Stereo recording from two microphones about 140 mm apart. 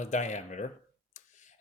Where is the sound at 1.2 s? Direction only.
60° left (ahead or behind).